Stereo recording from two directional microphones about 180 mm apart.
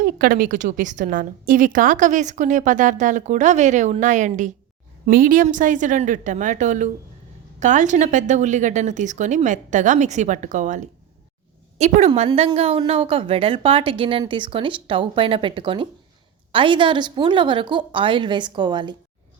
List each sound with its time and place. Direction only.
0.0 s a woman's voice: 50° right (ahead or behind); by 18.9 s 25° right (ahead or behind)